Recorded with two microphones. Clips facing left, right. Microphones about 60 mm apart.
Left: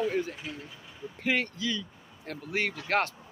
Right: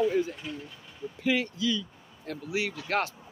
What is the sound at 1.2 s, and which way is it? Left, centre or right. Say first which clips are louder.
A man's voice: right 2 dB; left.